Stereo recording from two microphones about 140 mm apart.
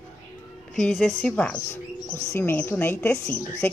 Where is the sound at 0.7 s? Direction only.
5° left (ahead or behind).